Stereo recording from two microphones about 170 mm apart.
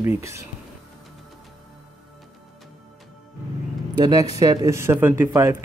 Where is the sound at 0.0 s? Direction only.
15° right (ahead or behind).